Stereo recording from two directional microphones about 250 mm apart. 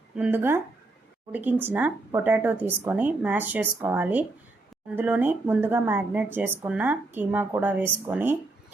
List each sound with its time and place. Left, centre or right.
0.2 s speech: centre